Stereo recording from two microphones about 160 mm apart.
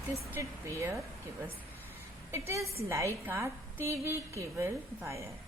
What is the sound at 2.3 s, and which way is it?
A woman's voice, 15° right (ahead or behind).